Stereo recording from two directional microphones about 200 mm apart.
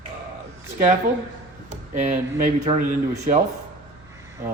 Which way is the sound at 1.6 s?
40° right (ahead or behind).